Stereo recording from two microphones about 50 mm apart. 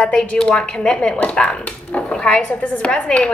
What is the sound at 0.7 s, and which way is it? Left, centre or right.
Speech, centre.